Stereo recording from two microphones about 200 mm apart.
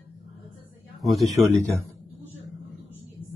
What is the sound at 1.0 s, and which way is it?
Speech, centre (ahead or behind).